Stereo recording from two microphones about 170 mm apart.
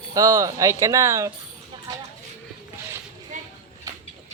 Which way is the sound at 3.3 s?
45° right (ahead or behind).